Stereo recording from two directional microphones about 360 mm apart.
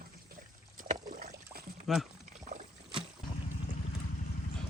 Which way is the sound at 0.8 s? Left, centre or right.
Right.